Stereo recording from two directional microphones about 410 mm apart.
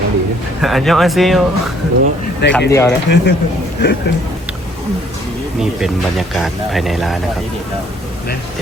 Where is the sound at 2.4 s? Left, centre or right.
Left.